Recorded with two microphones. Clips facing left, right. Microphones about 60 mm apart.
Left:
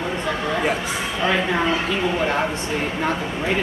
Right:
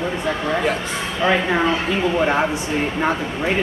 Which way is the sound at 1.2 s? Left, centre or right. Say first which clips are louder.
Right 3 dB; centre.